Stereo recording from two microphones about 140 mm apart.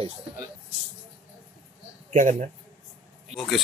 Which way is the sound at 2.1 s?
65° right (ahead or behind).